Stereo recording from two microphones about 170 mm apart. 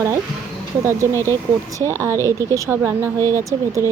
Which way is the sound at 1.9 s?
15° right (ahead or behind).